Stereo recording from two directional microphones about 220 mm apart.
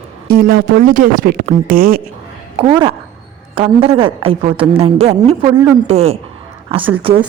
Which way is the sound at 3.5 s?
25° right (ahead or behind).